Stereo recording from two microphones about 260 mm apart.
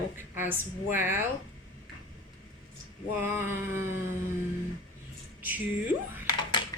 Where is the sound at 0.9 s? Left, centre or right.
Left.